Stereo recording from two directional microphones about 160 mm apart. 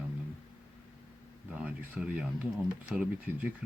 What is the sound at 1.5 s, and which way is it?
Speech, 5° right (ahead or behind).